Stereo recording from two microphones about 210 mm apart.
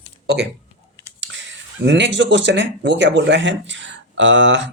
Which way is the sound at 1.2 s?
60° right (ahead or behind).